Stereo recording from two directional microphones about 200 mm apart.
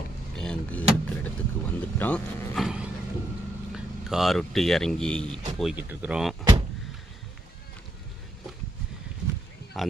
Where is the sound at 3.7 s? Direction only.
Centre (ahead or behind).